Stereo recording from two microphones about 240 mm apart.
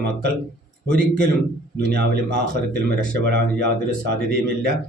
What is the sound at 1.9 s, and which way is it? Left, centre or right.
A man's voice, right.